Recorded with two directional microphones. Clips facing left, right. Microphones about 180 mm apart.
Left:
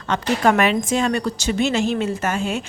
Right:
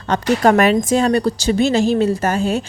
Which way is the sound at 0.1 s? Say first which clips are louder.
Right 4 dB; 40° right (ahead or behind).